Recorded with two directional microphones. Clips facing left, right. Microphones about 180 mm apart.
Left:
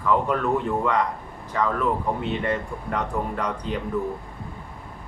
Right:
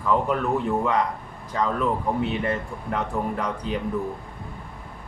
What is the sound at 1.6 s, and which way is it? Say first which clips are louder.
Speech: left 1 dB; 15° right (ahead or behind).